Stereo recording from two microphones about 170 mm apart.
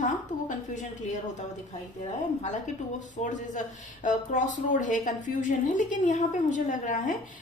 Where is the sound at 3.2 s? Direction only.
45° left (ahead or behind).